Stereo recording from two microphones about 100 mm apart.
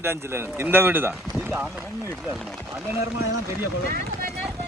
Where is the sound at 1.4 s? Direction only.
20° right (ahead or behind).